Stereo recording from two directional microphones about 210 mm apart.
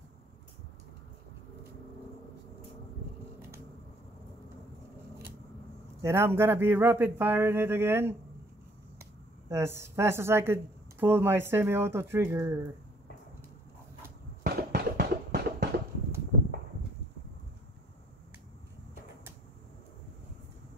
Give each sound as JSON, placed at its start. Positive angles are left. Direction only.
{"t": 6.0, "sound": "a woman's voice", "side_deg": -10}
{"t": 9.5, "sound": "a woman's voice", "side_deg": -10}
{"t": 14.4, "sound": "a sound", "side_deg": -45}